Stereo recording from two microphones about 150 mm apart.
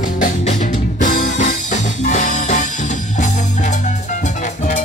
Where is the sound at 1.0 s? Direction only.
55° left (ahead or behind).